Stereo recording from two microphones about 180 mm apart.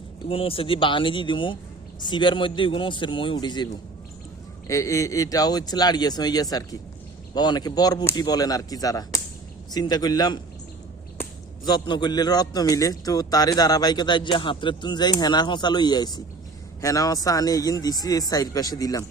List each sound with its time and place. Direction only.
0.3 s a man's voice: 30° left (ahead or behind)
4.7 s a man's voice: 15° left (ahead or behind)
11.6 s a man's voice: 25° left (ahead or behind)